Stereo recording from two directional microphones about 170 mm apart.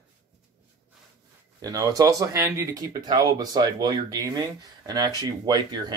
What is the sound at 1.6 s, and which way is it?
Speech, 20° right (ahead or behind).